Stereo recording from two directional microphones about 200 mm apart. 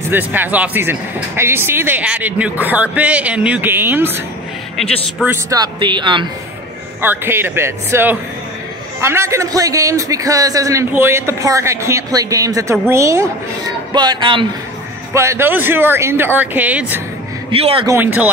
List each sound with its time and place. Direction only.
0.1 s a man's voice: 10° right (ahead or behind)
5.2 s speech: 15° right (ahead or behind)
7.0 s a man's voice: 10° right (ahead or behind)
15.1 s a man's voice: 10° right (ahead or behind)
17.5 s speech: 30° right (ahead or behind)
17.8 s a man's voice: 10° right (ahead or behind)